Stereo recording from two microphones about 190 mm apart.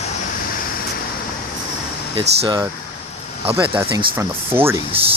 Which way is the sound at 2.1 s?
30° right (ahead or behind).